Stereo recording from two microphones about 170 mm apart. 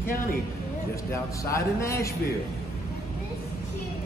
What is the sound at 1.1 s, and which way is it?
Speech, 15° left (ahead or behind).